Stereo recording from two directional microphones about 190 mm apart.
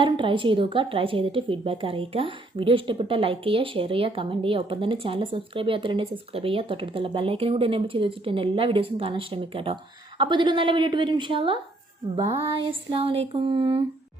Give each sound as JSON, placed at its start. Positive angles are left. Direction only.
{"t": 0.0, "sound": "a woman's voice", "side_deg": -25}
{"t": 12.9, "sound": "a woman's voice", "side_deg": -30}